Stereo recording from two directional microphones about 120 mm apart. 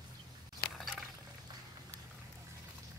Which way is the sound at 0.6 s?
Centre (ahead or behind).